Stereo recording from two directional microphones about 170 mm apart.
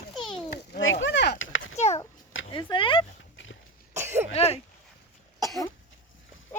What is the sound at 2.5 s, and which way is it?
Speech, 30° left (ahead or behind).